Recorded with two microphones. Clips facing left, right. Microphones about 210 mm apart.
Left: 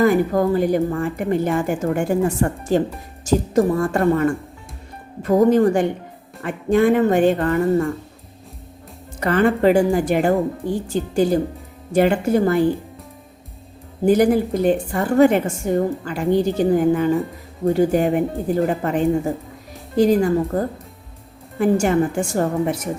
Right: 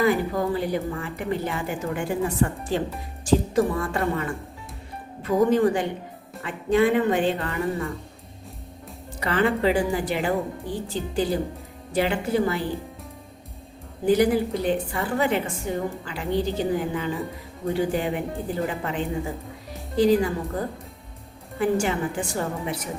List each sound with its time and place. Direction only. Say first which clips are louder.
0.0 s a woman's voice: left 6 dB; 45° left (ahead or behind)
9.2 s a woman's voice: left 6 dB; 50° left (ahead or behind)
14.0 s a woman's voice: left 4 dB; 45° left (ahead or behind)
21.6 s a woman's voice: left 6 dB; 45° left (ahead or behind)